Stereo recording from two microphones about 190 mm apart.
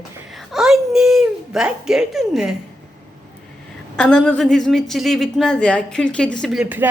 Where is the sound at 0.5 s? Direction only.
Centre (ahead or behind).